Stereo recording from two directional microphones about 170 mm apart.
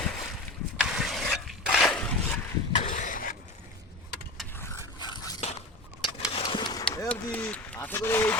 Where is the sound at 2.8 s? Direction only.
50° left (ahead or behind).